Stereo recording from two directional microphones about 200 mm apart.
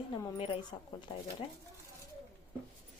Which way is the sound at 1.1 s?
25° left (ahead or behind).